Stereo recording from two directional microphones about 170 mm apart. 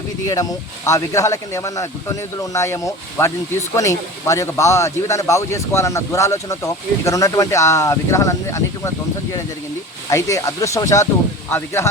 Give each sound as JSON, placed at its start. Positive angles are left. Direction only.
{"t": 0.9, "sound": "speech", "side_deg": 20}
{"t": 10.1, "sound": "speech", "side_deg": 20}